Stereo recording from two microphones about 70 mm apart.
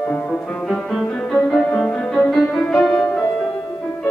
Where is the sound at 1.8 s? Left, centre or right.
Centre.